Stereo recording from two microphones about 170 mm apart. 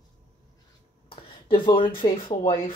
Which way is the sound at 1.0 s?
30° left (ahead or behind).